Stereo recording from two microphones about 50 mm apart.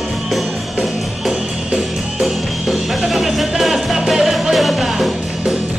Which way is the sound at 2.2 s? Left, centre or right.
Centre.